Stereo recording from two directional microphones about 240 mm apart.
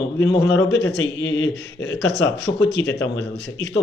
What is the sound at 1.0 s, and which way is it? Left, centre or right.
A man's voice, left.